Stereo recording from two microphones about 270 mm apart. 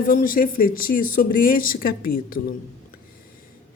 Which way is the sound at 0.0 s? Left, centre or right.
Left.